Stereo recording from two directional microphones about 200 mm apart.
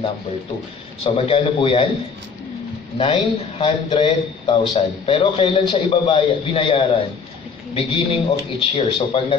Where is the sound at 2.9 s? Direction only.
25° left (ahead or behind).